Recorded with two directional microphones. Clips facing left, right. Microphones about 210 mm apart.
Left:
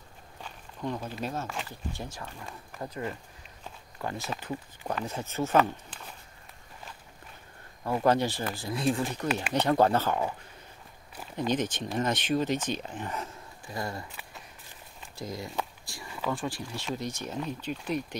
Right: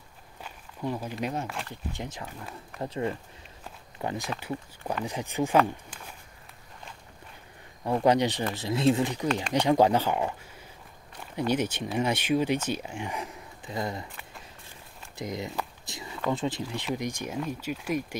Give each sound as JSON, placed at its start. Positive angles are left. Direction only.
{"t": 0.4, "sound": "walk", "side_deg": -10}
{"t": 2.0, "sound": "speech", "side_deg": -20}
{"t": 4.0, "sound": "speech", "side_deg": -15}
{"t": 8.0, "sound": "speech", "side_deg": -15}
{"t": 11.3, "sound": "speech", "side_deg": -10}
{"t": 15.1, "sound": "speech", "side_deg": -20}
{"t": 15.8, "sound": "a sound", "side_deg": -20}
{"t": 16.3, "sound": "speech", "side_deg": -20}